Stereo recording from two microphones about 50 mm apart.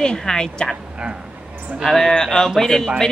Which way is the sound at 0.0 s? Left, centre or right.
Centre.